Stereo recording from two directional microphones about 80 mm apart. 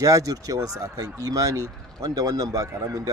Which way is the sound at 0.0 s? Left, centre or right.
Right.